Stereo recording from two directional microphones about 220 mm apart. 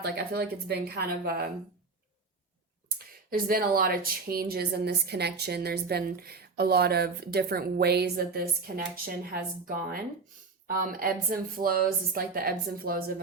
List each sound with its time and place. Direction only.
0.0 s a woman's voice: 45° right (ahead or behind)
3.2 s a woman's voice: 40° right (ahead or behind)